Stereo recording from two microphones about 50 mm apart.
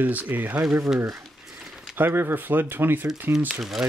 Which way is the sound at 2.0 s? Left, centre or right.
Right.